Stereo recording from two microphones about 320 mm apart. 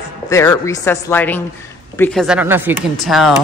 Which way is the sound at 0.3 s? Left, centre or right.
Centre.